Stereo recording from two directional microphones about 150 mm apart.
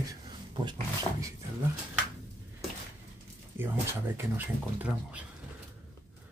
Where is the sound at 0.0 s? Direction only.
30° right (ahead or behind).